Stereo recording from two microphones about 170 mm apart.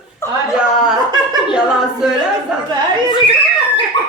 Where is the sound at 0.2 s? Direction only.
15° left (ahead or behind).